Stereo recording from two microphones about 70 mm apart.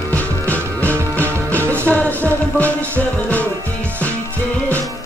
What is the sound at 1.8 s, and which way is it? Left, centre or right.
Music, left.